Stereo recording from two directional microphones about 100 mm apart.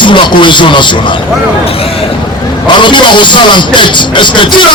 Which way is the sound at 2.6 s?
50° left (ahead or behind).